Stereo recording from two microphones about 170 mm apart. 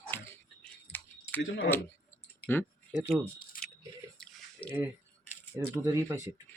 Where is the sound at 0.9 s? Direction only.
10° left (ahead or behind).